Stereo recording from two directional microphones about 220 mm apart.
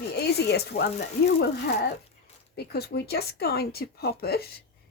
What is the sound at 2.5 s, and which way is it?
Speech, 45° left (ahead or behind).